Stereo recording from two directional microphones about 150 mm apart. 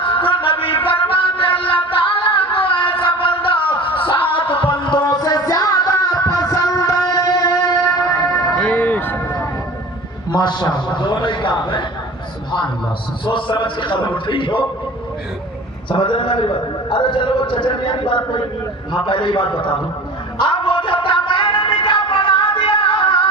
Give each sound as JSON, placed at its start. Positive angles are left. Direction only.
{"t": 0.0, "sound": "music", "side_deg": 35}
{"t": 8.5, "sound": "a sound", "side_deg": 10}
{"t": 10.3, "sound": "a man's voice", "side_deg": 30}
{"t": 13.2, "sound": "a man's voice", "side_deg": 30}
{"t": 15.9, "sound": "a man's voice", "side_deg": 35}
{"t": 20.4, "sound": "music", "side_deg": 30}